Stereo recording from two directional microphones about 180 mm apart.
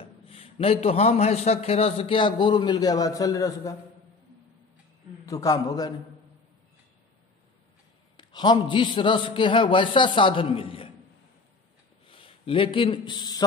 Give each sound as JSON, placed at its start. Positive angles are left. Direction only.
{"t": 0.0, "sound": "a man's voice", "side_deg": 30}
{"t": 5.2, "sound": "a man's voice", "side_deg": 20}
{"t": 8.2, "sound": "a man's voice", "side_deg": 25}
{"t": 12.1, "sound": "a man's voice", "side_deg": 30}